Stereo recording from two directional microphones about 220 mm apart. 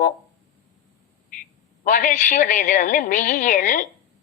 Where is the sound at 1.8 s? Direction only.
35° left (ahead or behind).